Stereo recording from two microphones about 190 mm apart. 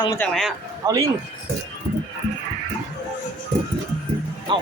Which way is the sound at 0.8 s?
20° right (ahead or behind).